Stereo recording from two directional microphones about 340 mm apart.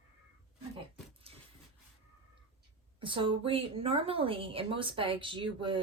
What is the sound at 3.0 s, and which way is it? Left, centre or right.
A woman's voice, centre.